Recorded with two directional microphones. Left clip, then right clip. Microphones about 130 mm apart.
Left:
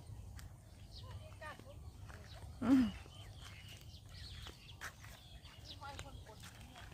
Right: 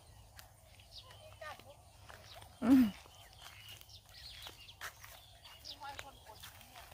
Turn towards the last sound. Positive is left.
turn(degrees=-45)  # may be behind; listen again after turning